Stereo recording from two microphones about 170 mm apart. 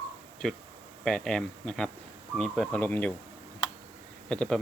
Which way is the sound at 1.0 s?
5° left (ahead or behind).